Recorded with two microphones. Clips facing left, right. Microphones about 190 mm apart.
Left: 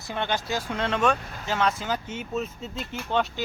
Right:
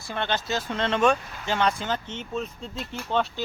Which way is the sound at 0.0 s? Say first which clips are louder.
Even; 15° left (ahead or behind).